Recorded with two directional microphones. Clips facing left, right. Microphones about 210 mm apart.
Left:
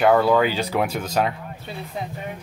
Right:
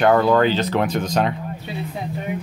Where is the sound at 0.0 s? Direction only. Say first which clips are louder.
Right 1 dB; 5° left (ahead or behind).